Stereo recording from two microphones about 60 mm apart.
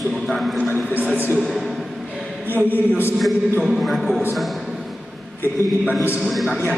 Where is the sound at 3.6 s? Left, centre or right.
Centre.